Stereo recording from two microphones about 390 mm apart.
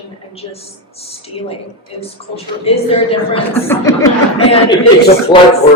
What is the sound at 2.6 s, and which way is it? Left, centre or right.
Speech, centre.